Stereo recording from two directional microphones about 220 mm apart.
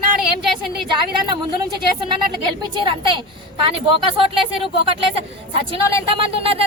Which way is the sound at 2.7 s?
20° right (ahead or behind).